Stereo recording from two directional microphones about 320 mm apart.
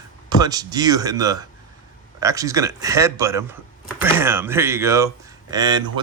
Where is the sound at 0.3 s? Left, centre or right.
Centre.